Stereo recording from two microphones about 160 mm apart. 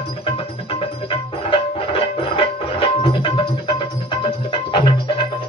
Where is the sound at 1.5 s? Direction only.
35° left (ahead or behind).